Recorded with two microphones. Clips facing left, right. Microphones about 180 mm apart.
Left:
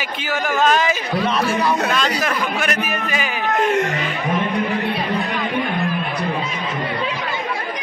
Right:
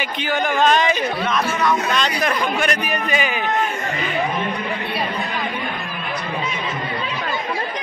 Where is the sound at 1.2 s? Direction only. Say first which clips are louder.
Left 4 dB; 30° left (ahead or behind).